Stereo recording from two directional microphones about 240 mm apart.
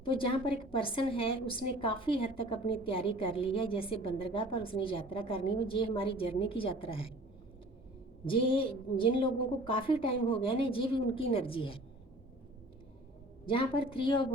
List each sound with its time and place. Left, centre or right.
0.0 s a woman's voice: left
8.3 s a woman's voice: left
13.4 s a woman's voice: left